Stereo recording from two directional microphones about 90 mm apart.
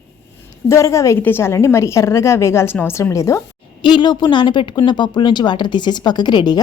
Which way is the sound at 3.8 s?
60° left (ahead or behind).